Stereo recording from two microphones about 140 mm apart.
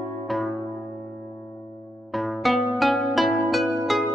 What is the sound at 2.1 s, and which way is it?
Music, centre (ahead or behind).